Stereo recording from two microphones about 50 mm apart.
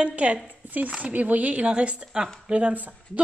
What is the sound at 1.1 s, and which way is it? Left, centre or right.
A woman's voice, right.